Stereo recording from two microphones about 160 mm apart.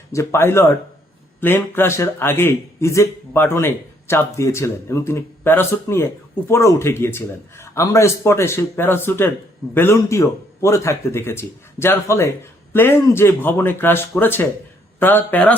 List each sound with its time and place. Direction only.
0.1 s a man's voice: 20° left (ahead or behind)